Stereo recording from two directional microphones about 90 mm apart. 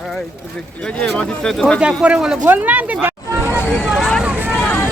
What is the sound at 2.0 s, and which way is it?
Speech, 10° right (ahead or behind).